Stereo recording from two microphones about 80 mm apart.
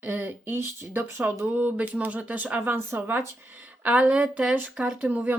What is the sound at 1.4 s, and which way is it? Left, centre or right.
Speech, centre.